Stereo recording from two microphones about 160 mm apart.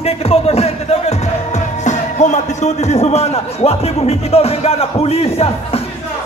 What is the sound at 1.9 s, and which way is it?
Speech, 50° left (ahead or behind).